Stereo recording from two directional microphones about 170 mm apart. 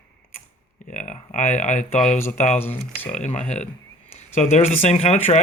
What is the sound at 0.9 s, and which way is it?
Speech, 50° left (ahead or behind).